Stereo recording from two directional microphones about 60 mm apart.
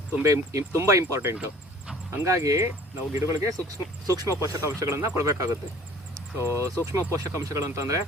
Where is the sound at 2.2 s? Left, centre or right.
Right.